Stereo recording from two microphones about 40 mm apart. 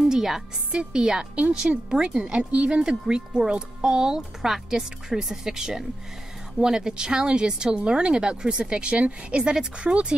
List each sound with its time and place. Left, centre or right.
0.1 s music: centre
0.7 s speech: centre
1.3 s speech: right
2.5 s speech: right
2.8 s speech: centre